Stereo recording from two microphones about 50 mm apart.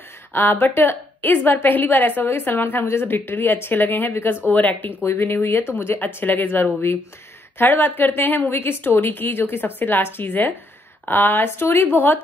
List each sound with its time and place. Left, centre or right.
0.3 s a woman's voice: left
2.2 s a woman's voice: left
2.5 s a woman's voice: left
4.5 s speech: left
5.0 s a woman's voice: left
8.9 s a woman's voice: left